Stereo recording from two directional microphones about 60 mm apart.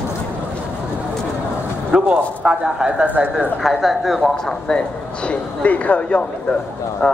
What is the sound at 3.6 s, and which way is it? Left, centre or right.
Speech, centre.